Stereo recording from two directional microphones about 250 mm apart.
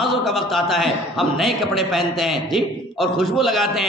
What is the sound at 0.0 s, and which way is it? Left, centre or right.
A man's voice, centre.